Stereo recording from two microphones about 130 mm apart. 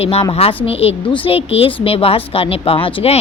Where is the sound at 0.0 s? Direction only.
50° left (ahead or behind).